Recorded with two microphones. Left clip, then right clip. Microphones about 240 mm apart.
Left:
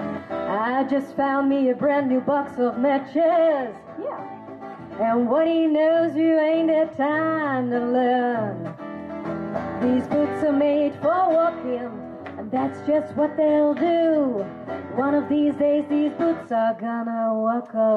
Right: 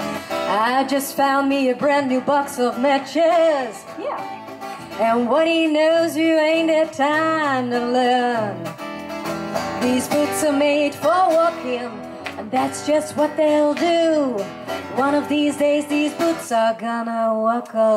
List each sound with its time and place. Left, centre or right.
0.5 s speech: centre
5.3 s speech: centre
9.8 s speech: centre
17.0 s speech: centre